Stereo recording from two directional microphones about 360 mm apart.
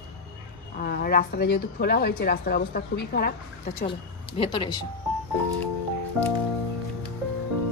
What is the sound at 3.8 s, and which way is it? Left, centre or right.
Speech, centre.